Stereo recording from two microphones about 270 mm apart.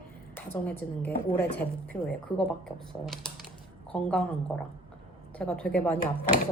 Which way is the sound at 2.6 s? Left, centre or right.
Centre.